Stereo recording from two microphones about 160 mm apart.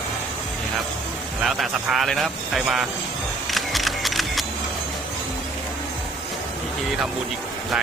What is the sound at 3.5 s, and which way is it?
Single-lens reflex camera, centre (ahead or behind).